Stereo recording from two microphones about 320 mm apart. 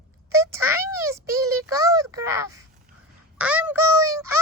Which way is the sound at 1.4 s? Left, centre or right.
Right.